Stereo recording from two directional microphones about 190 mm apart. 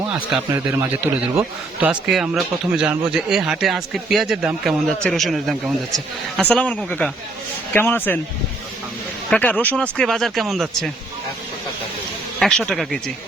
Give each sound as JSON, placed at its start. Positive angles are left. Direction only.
{"t": 0.0, "sound": "a man's voice", "side_deg": -5}
{"t": 9.3, "sound": "a man's voice", "side_deg": 10}
{"t": 12.4, "sound": "speech", "side_deg": 5}